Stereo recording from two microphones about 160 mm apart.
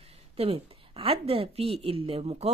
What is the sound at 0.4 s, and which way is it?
A woman's voice, 35° right (ahead or behind).